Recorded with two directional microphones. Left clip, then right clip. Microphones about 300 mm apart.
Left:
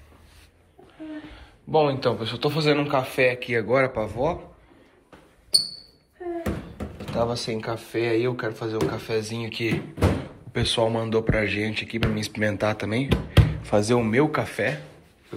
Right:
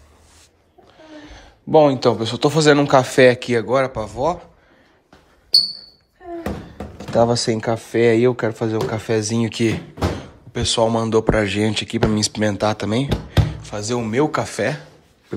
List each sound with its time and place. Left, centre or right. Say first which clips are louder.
1.3 s a man's voice: right 8 dB; right
3.5 s speech: right 3 dB; centre
7.0 s speech: right 9 dB; right
10.5 s speech: right 5 dB; centre